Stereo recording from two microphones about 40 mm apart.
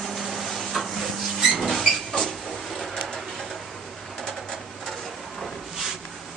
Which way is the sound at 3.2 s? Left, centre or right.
Centre.